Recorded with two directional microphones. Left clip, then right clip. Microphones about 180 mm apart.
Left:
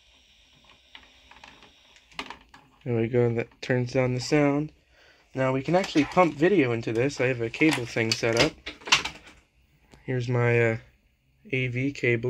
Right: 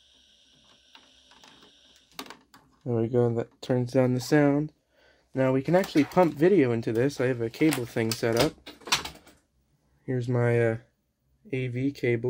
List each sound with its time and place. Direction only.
2.8 s speech: 20° right (ahead or behind)
3.8 s speech: 35° right (ahead or behind)
10.0 s speech: 25° right (ahead or behind)